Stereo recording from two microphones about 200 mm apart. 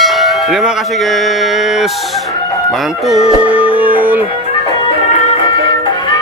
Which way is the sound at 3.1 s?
5° right (ahead or behind).